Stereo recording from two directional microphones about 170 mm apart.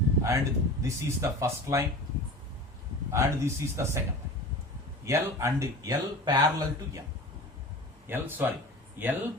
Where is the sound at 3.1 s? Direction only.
15° right (ahead or behind).